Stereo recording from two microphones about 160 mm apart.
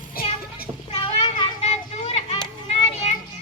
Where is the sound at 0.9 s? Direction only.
30° left (ahead or behind).